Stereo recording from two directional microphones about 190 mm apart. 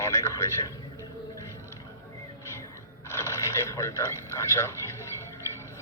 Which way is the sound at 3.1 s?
15° left (ahead or behind).